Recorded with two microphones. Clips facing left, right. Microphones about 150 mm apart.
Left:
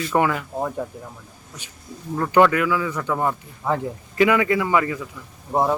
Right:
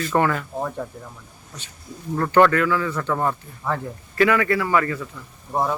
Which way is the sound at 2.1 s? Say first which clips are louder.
Even; 10° left (ahead or behind).